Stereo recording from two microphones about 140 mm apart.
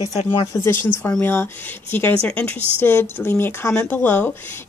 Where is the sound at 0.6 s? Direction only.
15° left (ahead or behind).